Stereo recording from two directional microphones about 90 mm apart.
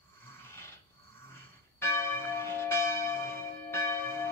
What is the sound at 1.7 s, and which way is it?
Church bell, 25° left (ahead or behind).